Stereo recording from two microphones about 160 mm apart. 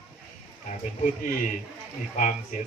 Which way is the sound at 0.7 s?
55° left (ahead or behind).